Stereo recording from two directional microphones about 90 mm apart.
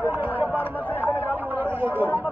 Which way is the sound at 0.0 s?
20° right (ahead or behind).